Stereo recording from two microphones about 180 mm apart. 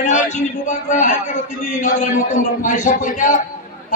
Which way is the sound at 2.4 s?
45° left (ahead or behind).